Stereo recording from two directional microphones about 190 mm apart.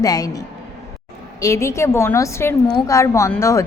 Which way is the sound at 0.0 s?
20° left (ahead or behind).